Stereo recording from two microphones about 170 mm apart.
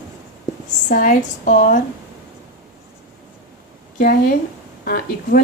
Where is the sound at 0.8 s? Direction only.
50° left (ahead or behind).